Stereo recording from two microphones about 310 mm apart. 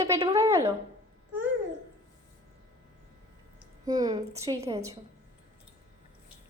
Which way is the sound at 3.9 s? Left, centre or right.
Centre.